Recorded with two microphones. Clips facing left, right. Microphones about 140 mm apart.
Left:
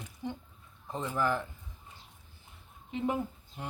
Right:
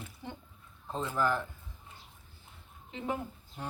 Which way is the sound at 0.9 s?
15° left (ahead or behind).